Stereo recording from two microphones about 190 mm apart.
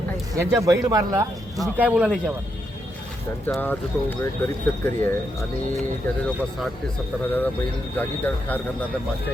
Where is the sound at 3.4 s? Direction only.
10° left (ahead or behind).